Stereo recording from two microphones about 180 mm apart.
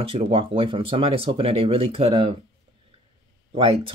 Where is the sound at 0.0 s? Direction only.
30° right (ahead or behind).